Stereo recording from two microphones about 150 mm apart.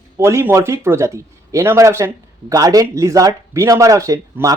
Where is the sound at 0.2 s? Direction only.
15° right (ahead or behind).